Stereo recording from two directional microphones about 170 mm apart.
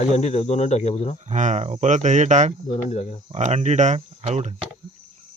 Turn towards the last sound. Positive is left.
turn(degrees=-40)  # may be behind; listen again after turning